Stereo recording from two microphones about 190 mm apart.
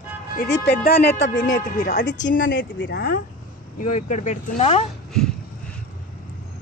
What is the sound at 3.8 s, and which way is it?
Speech, 40° left (ahead or behind).